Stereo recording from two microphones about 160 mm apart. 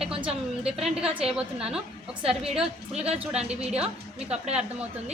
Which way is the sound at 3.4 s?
40° right (ahead or behind).